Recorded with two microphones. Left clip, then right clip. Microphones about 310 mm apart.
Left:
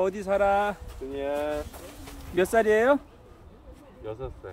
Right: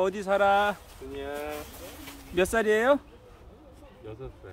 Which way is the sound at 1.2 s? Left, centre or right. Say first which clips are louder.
Left 6 dB; left.